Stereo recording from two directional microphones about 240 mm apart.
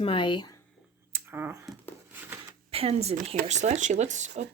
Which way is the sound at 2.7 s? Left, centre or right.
Right.